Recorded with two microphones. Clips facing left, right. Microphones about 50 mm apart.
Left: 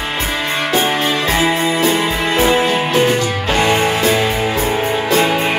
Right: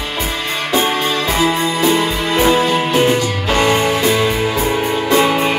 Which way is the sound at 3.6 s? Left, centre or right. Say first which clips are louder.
Even; left.